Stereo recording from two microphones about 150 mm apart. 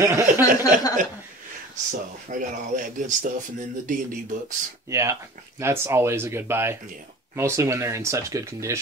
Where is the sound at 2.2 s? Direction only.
60° right (ahead or behind).